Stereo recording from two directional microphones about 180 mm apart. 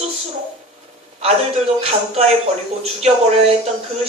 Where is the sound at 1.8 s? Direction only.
35° right (ahead or behind).